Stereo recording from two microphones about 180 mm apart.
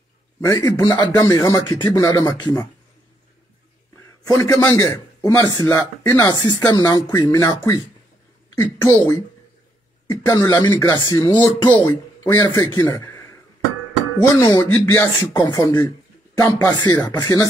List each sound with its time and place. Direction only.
0.4 s a man's voice: 15° left (ahead or behind)
4.2 s a man's voice: 20° left (ahead or behind)
6.2 s speech: 25° left (ahead or behind)
8.8 s a man's voice: 15° left (ahead or behind)
14.3 s speech: 20° left (ahead or behind)